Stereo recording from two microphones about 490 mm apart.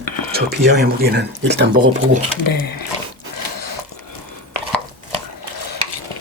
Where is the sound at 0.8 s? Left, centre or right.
Centre.